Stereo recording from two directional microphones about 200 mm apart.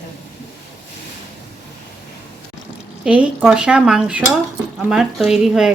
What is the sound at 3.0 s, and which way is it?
Dishes, 5° right (ahead or behind).